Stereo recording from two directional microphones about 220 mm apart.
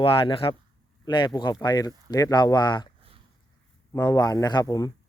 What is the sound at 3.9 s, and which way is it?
Speech, 15° left (ahead or behind).